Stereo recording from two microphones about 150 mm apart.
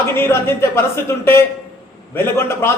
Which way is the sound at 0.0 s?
15° left (ahead or behind).